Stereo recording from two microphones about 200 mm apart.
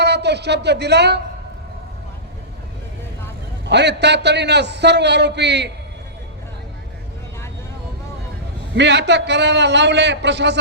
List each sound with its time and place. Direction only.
0.0 s speech: 55° right (ahead or behind)
3.7 s a man's voice: 60° right (ahead or behind)
8.7 s a man's voice: 60° right (ahead or behind)